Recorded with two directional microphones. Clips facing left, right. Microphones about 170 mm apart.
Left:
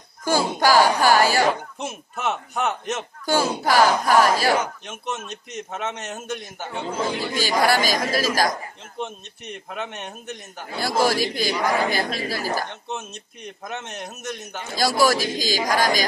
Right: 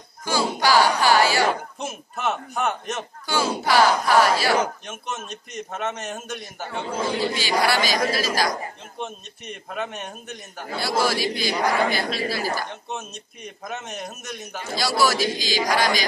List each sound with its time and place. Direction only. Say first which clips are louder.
0.2 s a sound: left 3 dB; 45° left (ahead or behind)
1.8 s a man's voice: even; centre (ahead or behind)
3.3 s speech: left 2 dB; 45° left (ahead or behind)
4.8 s a sound: left 2 dB; centre (ahead or behind)
5.3 s a man's voice: left 1 dB; centre (ahead or behind)
7.3 s a man's voice: left 5 dB; 45° left (ahead or behind)
9.0 s a man's voice: left 1 dB; centre (ahead or behind)
10.8 s a man's voice: left 2 dB; 45° left (ahead or behind)
12.9 s a man's voice: left 1 dB; centre (ahead or behind)
14.8 s a man's voice: left 2 dB; 45° left (ahead or behind)